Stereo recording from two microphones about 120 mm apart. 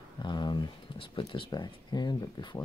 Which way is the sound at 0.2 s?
40° left (ahead or behind).